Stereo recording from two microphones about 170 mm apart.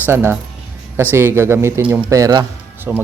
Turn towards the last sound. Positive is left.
turn(degrees=-15)  # may be behind; listen again after turning